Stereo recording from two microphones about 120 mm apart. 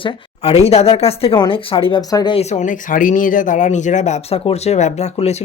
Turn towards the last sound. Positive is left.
turn(degrees=65)  # may be behind; listen again after turning